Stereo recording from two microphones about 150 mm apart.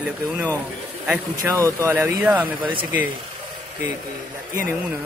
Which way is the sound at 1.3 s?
20° right (ahead or behind).